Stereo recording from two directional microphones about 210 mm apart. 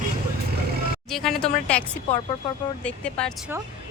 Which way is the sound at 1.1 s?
Centre (ahead or behind).